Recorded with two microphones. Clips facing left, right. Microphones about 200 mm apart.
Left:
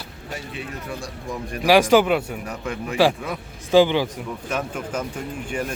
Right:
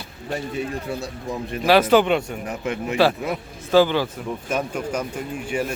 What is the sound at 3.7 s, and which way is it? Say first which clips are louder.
Speech: left 1 dB; 15° left (ahead or behind).